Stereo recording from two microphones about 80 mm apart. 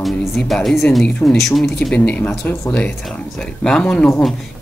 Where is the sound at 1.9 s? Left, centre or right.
Centre.